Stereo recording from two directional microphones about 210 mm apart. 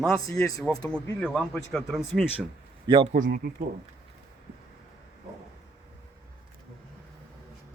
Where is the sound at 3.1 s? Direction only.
40° right (ahead or behind).